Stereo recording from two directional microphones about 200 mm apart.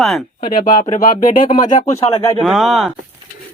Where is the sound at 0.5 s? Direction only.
40° left (ahead or behind).